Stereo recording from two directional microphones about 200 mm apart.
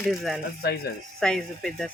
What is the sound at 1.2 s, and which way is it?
Speech, 5° left (ahead or behind).